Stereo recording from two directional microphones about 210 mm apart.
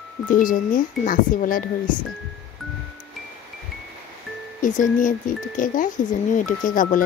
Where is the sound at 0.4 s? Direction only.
40° left (ahead or behind).